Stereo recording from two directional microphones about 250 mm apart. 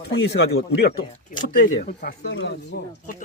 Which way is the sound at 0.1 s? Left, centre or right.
Left.